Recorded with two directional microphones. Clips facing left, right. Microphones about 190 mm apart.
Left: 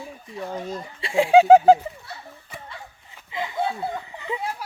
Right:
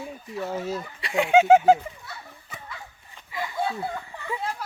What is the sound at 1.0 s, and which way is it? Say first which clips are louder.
Speech: left 4 dB; 30° left (ahead or behind).